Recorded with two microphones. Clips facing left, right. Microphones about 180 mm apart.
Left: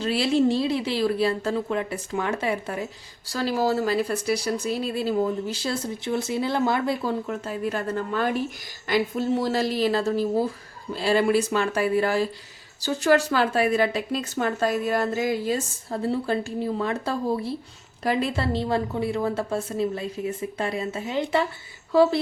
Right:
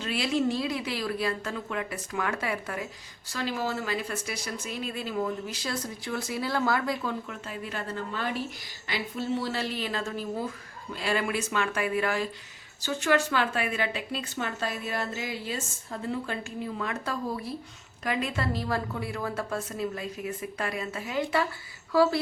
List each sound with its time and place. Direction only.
0.0 s a woman's voice: 30° left (ahead or behind)